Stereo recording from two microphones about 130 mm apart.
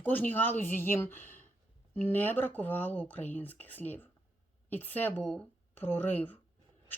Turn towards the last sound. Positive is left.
turn(degrees=15)  # may be behind; listen again after turning